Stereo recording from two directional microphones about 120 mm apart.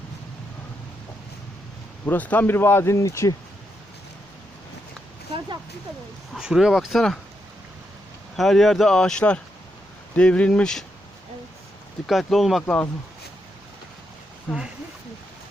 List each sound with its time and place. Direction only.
2.0 s speech: 15° left (ahead or behind)
6.3 s speech: 5° right (ahead or behind)
8.4 s speech: centre (ahead or behind)
12.0 s speech: centre (ahead or behind)